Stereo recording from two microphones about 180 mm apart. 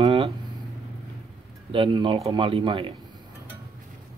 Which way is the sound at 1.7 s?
30° right (ahead or behind).